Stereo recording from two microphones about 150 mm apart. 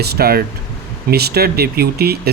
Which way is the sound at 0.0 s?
90° right.